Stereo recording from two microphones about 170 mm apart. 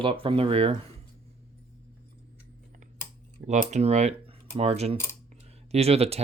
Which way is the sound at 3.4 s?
45° right (ahead or behind).